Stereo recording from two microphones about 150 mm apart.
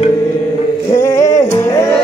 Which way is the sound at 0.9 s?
20° left (ahead or behind).